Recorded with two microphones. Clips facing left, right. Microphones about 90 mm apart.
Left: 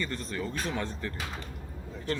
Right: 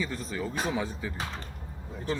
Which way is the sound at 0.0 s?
5° right (ahead or behind).